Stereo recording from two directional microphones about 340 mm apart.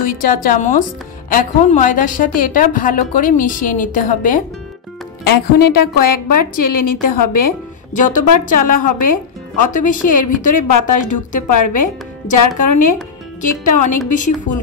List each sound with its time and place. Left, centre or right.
0.1 s a woman's voice: left
5.2 s a woman's voice: left